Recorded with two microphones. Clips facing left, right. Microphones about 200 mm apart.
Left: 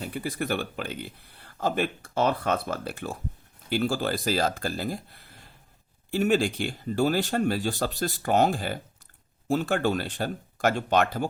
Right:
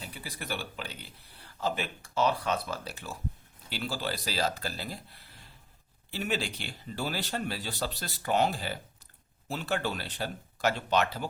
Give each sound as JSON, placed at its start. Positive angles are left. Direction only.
{"t": 0.0, "sound": "speech", "side_deg": 50}